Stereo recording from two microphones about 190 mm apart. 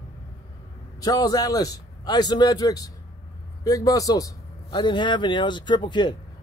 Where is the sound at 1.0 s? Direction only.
20° left (ahead or behind).